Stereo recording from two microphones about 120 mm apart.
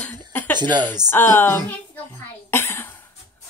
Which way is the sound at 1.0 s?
20° left (ahead or behind).